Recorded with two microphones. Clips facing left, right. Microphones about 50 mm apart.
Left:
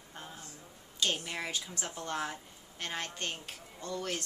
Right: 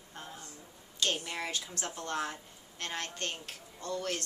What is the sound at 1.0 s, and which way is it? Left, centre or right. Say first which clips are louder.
A woman's voice: even; centre.